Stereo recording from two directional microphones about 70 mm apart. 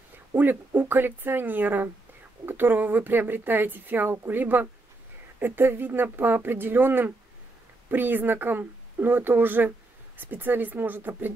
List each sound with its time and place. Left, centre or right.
0.4 s speech: right